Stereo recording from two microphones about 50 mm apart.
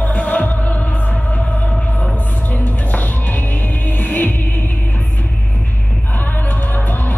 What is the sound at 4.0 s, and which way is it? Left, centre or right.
Music, left.